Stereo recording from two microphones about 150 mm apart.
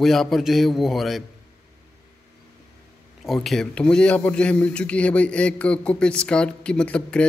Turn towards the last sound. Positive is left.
turn(degrees=5)  # may be behind; listen again after turning